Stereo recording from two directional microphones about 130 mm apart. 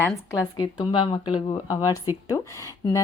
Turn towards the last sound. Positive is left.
turn(degrees=25)  # may be behind; listen again after turning